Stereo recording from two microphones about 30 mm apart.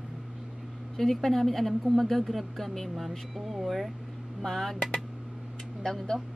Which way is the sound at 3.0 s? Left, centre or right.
Centre.